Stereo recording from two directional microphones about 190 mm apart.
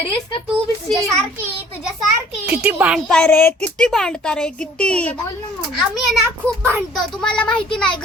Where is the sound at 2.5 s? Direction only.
10° right (ahead or behind).